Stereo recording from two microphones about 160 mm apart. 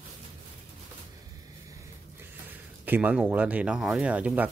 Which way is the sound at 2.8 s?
10° right (ahead or behind).